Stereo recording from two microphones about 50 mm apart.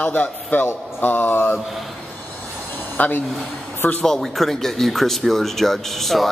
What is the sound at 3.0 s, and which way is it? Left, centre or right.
Speech, left.